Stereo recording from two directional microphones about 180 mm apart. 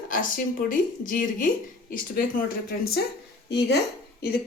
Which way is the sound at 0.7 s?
50° left (ahead or behind).